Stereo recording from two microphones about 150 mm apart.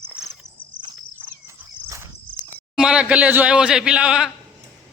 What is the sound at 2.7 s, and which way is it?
Speech, 5° right (ahead or behind).